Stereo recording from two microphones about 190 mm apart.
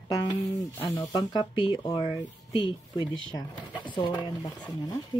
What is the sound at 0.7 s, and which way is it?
Speech, 20° left (ahead or behind).